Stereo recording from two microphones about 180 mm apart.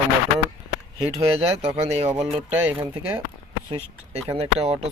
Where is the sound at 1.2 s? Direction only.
35° right (ahead or behind).